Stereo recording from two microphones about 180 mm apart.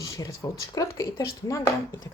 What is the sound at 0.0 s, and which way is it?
A woman's voice, 20° left (ahead or behind).